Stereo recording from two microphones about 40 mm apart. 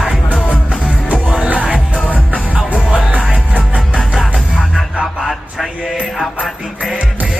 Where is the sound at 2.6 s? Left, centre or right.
Right.